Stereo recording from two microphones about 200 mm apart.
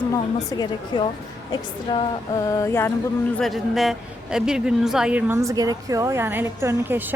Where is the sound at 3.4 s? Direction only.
Centre (ahead or behind).